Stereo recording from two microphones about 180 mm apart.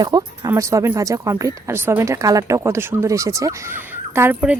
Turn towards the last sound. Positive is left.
turn(degrees=-10)  # may be behind; listen again after turning